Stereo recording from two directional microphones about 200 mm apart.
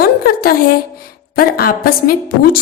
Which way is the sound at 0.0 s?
50° left (ahead or behind).